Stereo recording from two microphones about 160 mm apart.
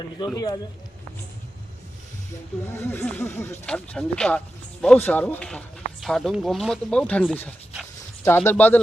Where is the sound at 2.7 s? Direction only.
15° left (ahead or behind).